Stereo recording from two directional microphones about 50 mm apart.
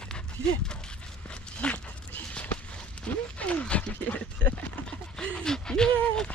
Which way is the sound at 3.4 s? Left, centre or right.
Left.